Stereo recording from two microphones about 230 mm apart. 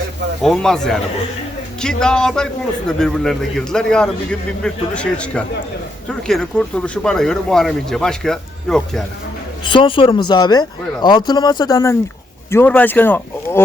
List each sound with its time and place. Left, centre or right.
0.4 s a man's voice: centre
9.6 s a man's voice: left